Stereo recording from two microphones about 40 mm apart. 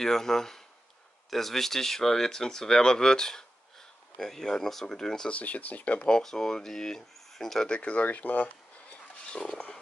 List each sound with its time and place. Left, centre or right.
0.0 s speech: centre
5.3 s speech: left
6.0 s speech: centre
7.6 s speech: left
8.0 s speech: left
8.5 s a sound: left